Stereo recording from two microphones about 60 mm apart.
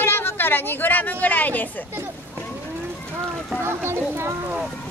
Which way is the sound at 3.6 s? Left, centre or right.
Right.